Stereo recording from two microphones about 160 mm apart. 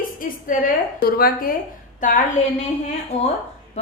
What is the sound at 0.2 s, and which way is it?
A woman's voice, 60° left (ahead or behind).